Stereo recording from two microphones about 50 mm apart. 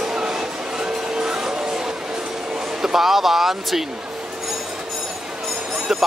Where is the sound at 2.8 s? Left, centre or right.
Centre.